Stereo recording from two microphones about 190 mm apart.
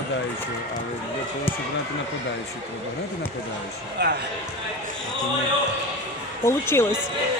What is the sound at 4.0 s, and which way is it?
Speech, 65° right (ahead or behind).